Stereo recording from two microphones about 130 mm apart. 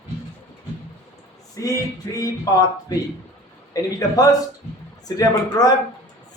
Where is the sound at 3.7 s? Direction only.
25° left (ahead or behind).